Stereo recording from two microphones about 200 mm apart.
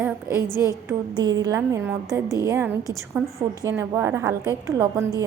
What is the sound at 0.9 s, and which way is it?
A woman's voice, 20° right (ahead or behind).